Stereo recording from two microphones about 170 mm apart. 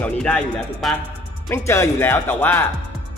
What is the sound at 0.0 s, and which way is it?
Speech, 5° left (ahead or behind).